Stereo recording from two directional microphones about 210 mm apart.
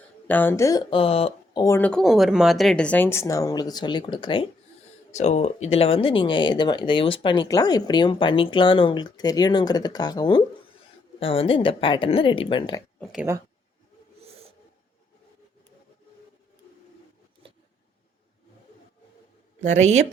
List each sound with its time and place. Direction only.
0.3 s speech: 10° left (ahead or behind); by 1.6 s 30° left (ahead or behind)
1.6 s speech: 10° left (ahead or behind)
13.0 s speech: centre (ahead or behind)
19.6 s a woman's voice: 35° right (ahead or behind)